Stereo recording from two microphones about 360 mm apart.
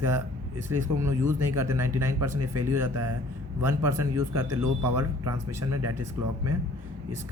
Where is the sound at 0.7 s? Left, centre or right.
Centre.